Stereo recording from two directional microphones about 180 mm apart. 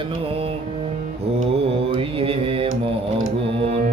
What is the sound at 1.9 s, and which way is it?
Mantra, 30° right (ahead or behind).